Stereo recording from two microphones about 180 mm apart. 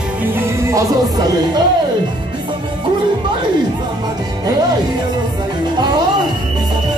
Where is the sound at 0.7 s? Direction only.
20° right (ahead or behind).